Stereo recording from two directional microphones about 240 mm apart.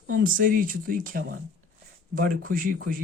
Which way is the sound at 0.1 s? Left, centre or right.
Right.